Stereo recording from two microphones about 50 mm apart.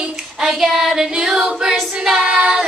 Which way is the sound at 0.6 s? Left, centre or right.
Centre.